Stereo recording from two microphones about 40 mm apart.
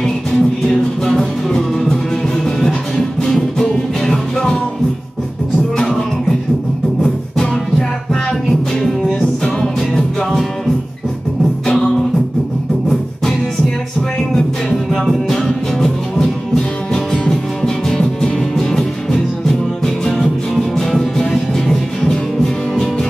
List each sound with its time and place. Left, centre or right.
0.3 s music: centre
8.5 s music: centre
14.3 s music: centre